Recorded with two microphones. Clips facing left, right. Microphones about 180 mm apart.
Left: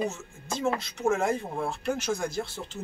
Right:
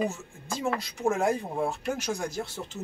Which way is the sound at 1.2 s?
15° right (ahead or behind).